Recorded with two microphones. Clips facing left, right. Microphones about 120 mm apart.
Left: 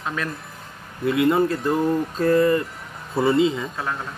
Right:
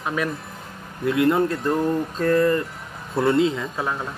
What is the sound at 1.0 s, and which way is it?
Speech, centre (ahead or behind).